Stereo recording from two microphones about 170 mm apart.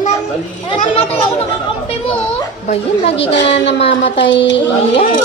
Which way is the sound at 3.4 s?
90° left.